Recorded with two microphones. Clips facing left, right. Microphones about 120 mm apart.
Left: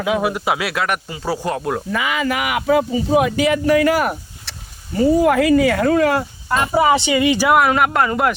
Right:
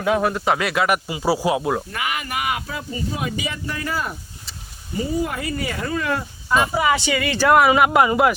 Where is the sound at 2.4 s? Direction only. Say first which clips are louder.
Left 9 dB; 90° left.